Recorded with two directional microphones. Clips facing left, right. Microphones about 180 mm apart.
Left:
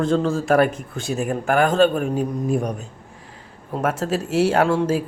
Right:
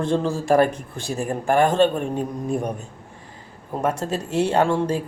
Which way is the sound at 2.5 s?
Centre (ahead or behind).